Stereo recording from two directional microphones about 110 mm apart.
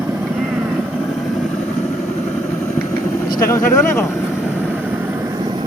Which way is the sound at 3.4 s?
25° left (ahead or behind).